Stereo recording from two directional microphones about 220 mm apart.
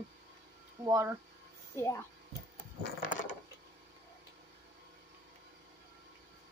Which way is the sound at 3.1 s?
35° left (ahead or behind).